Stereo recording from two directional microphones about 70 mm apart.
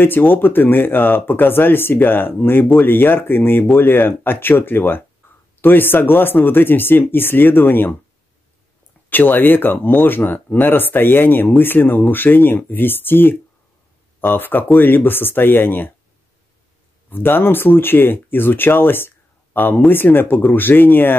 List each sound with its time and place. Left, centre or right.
0.0 s speech: left
5.2 s a sound: left
5.6 s speech: left
9.1 s speech: left
17.1 s speech: left